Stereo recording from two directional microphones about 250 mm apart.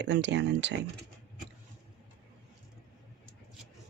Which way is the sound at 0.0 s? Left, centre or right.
Right.